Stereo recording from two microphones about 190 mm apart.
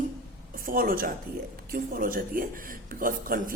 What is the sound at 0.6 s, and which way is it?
Speech, 50° right (ahead or behind).